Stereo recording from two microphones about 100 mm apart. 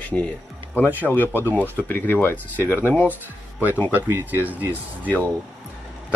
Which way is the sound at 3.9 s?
20° right (ahead or behind).